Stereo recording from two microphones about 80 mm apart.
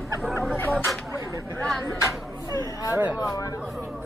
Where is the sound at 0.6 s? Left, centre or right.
Left.